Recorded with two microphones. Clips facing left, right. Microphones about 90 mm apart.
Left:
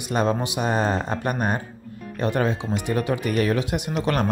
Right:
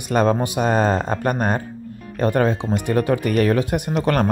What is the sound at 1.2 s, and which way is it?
Speech, 40° right (ahead or behind).